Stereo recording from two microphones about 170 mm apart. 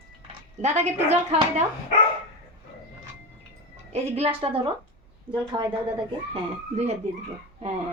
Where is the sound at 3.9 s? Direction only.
35° right (ahead or behind).